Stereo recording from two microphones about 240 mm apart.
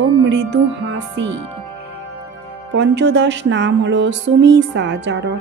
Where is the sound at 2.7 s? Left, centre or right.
Right.